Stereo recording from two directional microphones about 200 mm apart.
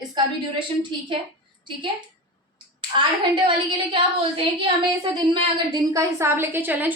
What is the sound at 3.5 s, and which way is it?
Speech, 25° right (ahead or behind).